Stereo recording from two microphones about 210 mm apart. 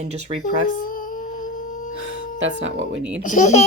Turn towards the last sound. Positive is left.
turn(degrees=35)  # may be behind; listen again after turning